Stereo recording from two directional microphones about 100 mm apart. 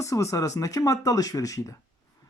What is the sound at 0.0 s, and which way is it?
Speech, 30° left (ahead or behind).